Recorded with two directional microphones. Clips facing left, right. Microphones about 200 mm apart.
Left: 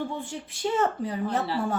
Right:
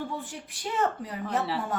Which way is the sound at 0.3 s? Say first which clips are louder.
Left 7 dB; 25° left (ahead or behind).